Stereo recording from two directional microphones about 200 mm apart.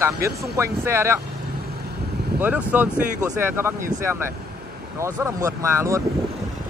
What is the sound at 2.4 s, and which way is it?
Speech, 10° right (ahead or behind).